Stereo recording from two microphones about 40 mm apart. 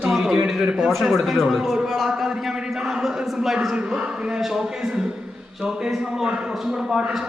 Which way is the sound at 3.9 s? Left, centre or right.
Right.